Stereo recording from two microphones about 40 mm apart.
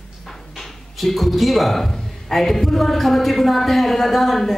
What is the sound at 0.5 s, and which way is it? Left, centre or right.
Speech, centre.